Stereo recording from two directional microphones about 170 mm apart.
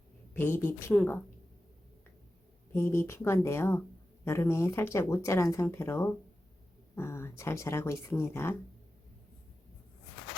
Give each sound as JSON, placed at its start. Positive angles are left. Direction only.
{"t": 0.3, "sound": "speech", "side_deg": 15}
{"t": 2.7, "sound": "speech", "side_deg": 15}